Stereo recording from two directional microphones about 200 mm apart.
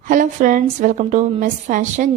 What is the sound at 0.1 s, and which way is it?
A woman's voice, 40° right (ahead or behind).